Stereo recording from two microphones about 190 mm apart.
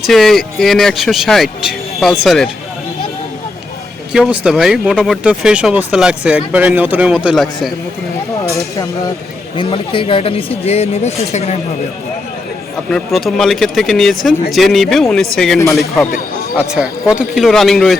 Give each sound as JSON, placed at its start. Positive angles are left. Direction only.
{"t": 0.0, "sound": "speech", "side_deg": 0}
{"t": 4.1, "sound": "speech", "side_deg": -5}
{"t": 8.4, "sound": "speech", "side_deg": 15}
{"t": 9.6, "sound": "speech", "side_deg": 30}
{"t": 12.9, "sound": "speech", "side_deg": 0}
{"t": 16.6, "sound": "speech", "side_deg": -5}